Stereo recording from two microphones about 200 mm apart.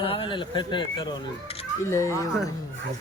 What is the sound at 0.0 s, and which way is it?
Speech, 25° left (ahead or behind).